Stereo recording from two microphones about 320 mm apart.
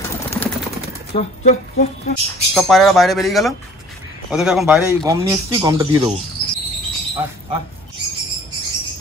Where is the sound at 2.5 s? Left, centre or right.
Centre.